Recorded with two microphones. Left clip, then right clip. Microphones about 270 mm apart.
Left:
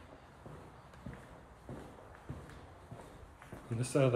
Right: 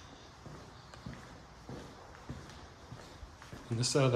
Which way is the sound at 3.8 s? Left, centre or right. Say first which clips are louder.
Right 1 dB; centre.